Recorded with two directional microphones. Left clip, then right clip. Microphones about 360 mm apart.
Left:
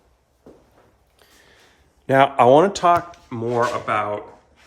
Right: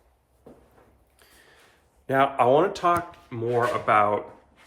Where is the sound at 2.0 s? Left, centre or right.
Left.